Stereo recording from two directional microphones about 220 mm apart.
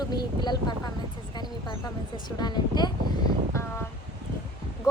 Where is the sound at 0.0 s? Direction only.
20° left (ahead or behind).